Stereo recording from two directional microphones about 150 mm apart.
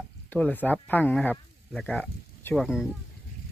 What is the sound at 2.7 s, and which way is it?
Speech, 5° right (ahead or behind).